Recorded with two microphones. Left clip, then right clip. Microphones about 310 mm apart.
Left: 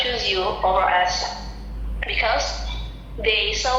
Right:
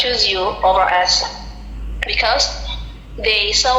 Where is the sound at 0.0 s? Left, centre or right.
Right.